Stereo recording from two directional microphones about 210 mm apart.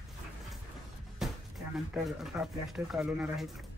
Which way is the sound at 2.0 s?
Centre (ahead or behind).